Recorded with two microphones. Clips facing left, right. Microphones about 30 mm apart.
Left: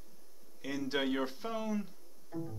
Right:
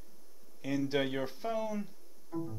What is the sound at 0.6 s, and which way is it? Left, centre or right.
Speech, centre.